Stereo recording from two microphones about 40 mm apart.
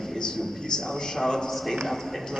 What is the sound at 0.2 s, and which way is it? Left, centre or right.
A man's voice, centre.